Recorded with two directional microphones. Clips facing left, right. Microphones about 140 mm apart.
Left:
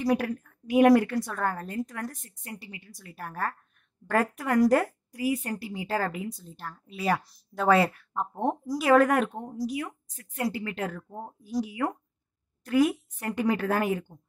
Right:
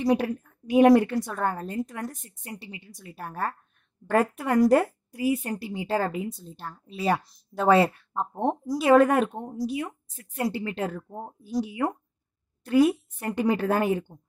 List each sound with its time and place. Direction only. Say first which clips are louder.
0.0 s a woman's voice: right 2 dB; 20° right (ahead or behind)